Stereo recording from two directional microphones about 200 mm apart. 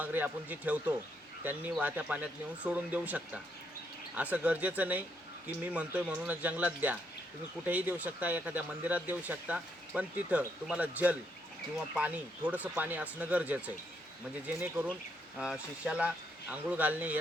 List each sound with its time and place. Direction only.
0.0 s speech: 10° right (ahead or behind)